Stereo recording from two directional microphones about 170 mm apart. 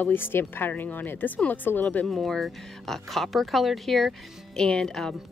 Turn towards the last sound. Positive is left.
turn(degrees=5)  # may be behind; listen again after turning